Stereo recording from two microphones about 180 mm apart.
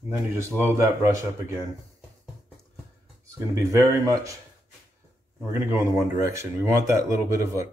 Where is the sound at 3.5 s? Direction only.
20° right (ahead or behind).